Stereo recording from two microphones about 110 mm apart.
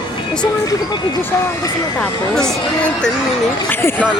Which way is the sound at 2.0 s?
5° left (ahead or behind).